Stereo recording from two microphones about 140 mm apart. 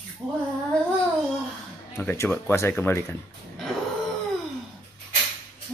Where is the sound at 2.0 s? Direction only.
15° left (ahead or behind).